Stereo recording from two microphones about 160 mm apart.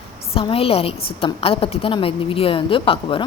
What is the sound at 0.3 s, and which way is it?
A woman's voice, 35° left (ahead or behind).